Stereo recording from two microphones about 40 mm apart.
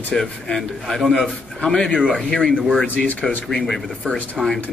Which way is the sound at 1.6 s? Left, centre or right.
Left.